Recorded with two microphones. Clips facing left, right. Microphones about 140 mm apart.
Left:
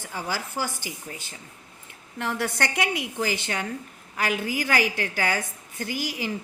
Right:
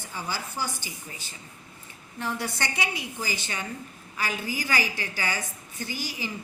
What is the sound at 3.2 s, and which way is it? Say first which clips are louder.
A woman's voice: left 6 dB; 65° left (ahead or behind).